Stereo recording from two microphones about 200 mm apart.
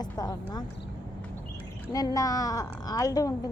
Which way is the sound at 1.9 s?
20° left (ahead or behind).